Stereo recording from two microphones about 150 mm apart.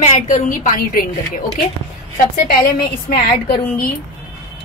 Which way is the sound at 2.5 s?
90° left.